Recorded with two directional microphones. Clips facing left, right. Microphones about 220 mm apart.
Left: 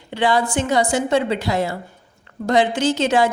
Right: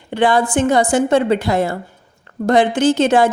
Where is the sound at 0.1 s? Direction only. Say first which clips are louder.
Right 4 dB; 50° right (ahead or behind).